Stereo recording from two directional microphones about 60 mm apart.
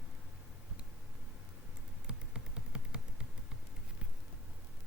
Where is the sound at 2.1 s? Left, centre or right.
Centre.